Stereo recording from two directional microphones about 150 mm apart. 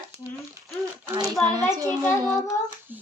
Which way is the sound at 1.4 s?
25° right (ahead or behind).